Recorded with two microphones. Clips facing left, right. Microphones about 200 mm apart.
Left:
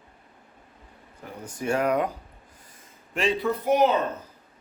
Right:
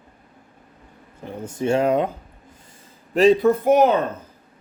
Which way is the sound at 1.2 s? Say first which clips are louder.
Right 7 dB; 25° right (ahead or behind).